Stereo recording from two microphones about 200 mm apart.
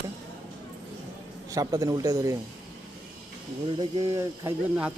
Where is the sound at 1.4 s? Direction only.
15° right (ahead or behind).